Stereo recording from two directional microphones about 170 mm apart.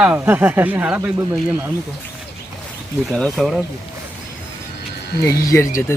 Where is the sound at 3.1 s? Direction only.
Centre (ahead or behind).